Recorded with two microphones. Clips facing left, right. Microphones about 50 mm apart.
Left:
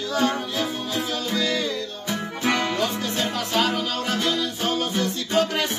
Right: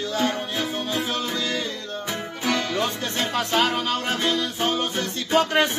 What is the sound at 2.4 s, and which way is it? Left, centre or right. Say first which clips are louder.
Music: left 2 dB; left.